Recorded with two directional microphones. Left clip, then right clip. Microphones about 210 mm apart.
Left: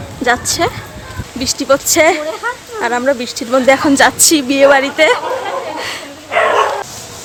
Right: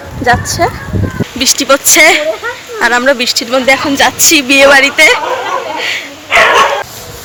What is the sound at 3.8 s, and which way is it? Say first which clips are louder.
Speech: right 1 dB; 35° left (ahead or behind).